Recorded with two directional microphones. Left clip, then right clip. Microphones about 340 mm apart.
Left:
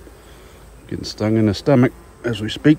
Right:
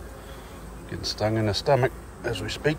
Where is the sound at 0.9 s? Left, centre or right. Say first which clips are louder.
Left 5 dB; left.